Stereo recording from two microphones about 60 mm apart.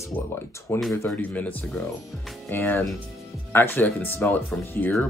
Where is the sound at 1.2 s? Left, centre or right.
Left.